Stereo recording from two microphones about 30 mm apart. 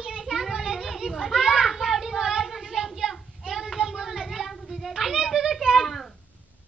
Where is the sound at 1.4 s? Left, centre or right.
Centre.